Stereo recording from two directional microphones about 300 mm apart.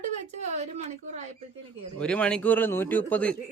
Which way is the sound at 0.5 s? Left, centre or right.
Right.